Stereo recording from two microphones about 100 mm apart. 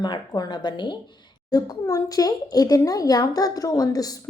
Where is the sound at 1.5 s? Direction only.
35° left (ahead or behind).